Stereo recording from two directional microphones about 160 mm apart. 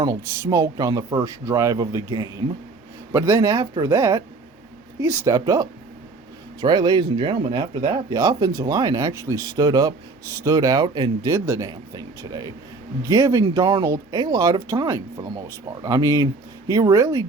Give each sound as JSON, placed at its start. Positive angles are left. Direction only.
{"t": 0.0, "sound": "speech", "side_deg": -25}